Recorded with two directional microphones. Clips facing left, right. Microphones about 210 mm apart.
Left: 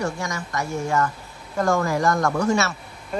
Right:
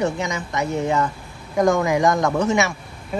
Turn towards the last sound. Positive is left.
turn(degrees=-15)  # may be behind; listen again after turning